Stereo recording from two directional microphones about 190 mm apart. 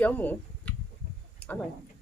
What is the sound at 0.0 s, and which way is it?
Speech, 10° left (ahead or behind).